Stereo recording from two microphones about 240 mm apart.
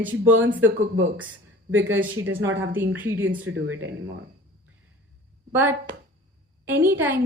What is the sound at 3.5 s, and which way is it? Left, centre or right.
Speech, right.